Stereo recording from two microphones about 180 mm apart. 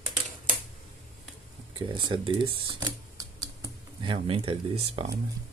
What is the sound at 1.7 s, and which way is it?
Speech, 25° right (ahead or behind).